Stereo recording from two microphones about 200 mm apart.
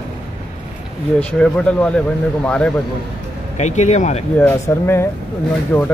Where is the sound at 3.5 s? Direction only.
35° left (ahead or behind).